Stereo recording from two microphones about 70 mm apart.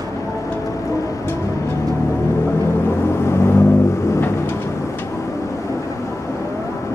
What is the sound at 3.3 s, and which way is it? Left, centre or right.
Vehicle, left.